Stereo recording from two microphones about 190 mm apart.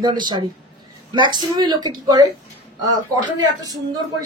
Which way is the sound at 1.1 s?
25° right (ahead or behind).